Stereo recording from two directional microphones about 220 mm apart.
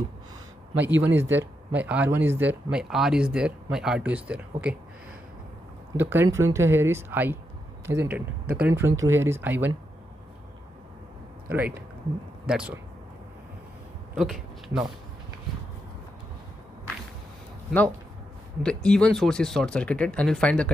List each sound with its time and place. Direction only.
0.7 s speech: 10° right (ahead or behind)
5.9 s speech: 10° right (ahead or behind)
12.4 s speech: 5° right (ahead or behind)
14.1 s speech: centre (ahead or behind)
17.6 s speech: 5° left (ahead or behind)